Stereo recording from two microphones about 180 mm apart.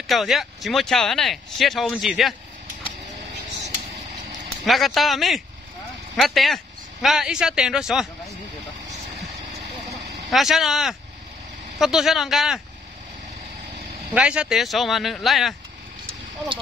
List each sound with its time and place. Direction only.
0.0 s speech: centre (ahead or behind)
4.6 s speech: centre (ahead or behind)
9.5 s vehicle: 35° right (ahead or behind)
10.3 s speech: centre (ahead or behind)
14.1 s speech: 5° right (ahead or behind)